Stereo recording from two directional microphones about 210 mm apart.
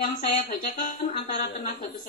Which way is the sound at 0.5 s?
40° left (ahead or behind).